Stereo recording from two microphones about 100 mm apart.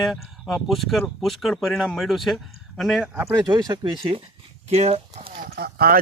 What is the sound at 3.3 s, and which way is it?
Speech, 45° right (ahead or behind).